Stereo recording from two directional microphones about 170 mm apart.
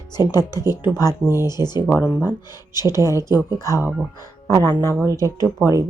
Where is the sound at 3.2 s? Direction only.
20° left (ahead or behind).